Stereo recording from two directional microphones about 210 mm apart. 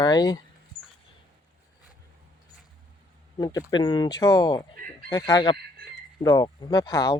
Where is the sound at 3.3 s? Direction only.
15° left (ahead or behind).